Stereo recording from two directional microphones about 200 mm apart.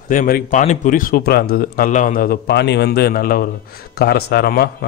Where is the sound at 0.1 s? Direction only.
40° left (ahead or behind).